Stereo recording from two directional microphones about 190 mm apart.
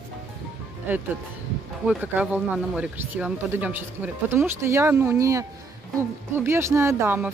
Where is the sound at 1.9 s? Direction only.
10° right (ahead or behind).